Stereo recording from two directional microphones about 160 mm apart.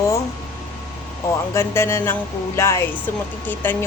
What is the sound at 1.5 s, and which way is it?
A woman's voice, 15° left (ahead or behind).